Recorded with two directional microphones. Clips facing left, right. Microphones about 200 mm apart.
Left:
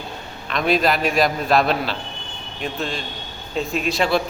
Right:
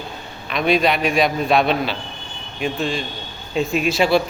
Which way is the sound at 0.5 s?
Centre (ahead or behind).